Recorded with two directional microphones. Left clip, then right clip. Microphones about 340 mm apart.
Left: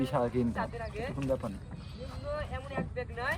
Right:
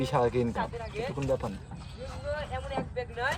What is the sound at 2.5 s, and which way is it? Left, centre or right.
Speech, right.